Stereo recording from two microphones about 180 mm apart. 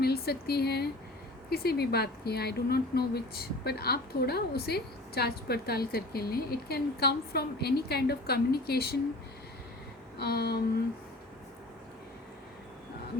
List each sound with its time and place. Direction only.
0.0 s speech: 60° left (ahead or behind)
10.2 s speech: 60° left (ahead or behind)